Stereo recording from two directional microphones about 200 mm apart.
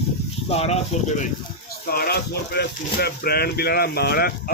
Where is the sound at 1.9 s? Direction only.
50° left (ahead or behind).